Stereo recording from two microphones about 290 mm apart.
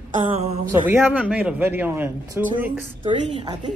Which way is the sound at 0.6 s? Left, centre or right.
Centre.